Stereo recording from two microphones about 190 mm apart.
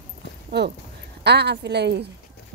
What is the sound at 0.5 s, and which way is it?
Speech, 55° right (ahead or behind).